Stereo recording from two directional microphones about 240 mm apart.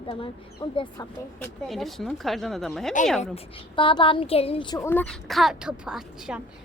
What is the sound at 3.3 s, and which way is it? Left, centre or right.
A child's voice, left.